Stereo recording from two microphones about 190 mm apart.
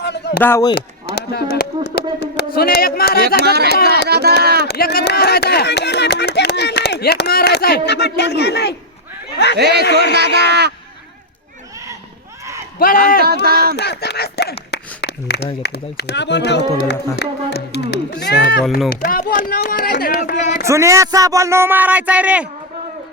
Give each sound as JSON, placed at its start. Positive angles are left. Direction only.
{"t": 0.0, "sound": "a sound", "side_deg": 65}
{"t": 0.3, "sound": "speech", "side_deg": 10}
{"t": 0.8, "sound": "speech", "side_deg": 60}
{"t": 3.4, "sound": "speech", "side_deg": -60}
{"t": 4.7, "sound": "speech", "side_deg": 55}
{"t": 10.2, "sound": "speech", "side_deg": -60}
{"t": 12.8, "sound": "speech", "side_deg": 50}
{"t": 13.2, "sound": "speech", "side_deg": -55}
{"t": 13.7, "sound": "speech", "side_deg": 60}
{"t": 14.7, "sound": "a sound", "side_deg": 65}
{"t": 15.6, "sound": "speech", "side_deg": 60}
{"t": 19.0, "sound": "speech", "side_deg": 45}
{"t": 20.7, "sound": "speech", "side_deg": -15}